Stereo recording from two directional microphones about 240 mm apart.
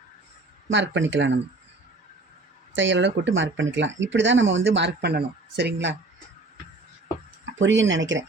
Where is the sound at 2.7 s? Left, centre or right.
Right.